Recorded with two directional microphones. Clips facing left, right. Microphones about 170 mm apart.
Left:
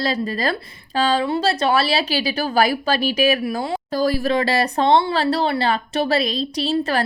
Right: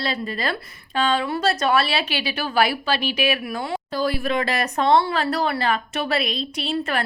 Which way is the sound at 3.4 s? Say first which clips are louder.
Left 4 dB; 30° left (ahead or behind).